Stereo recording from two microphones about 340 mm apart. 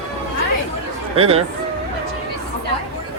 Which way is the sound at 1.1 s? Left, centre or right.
Centre.